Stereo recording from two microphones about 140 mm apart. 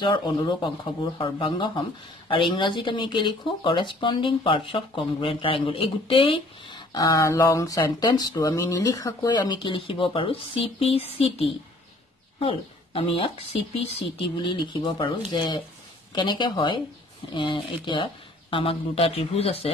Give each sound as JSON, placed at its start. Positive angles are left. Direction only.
{"t": 0.0, "sound": "speech", "side_deg": 35}
{"t": 14.4, "sound": "speech", "side_deg": 35}